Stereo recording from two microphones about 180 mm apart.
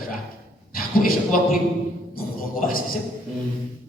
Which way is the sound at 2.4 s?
50° left (ahead or behind).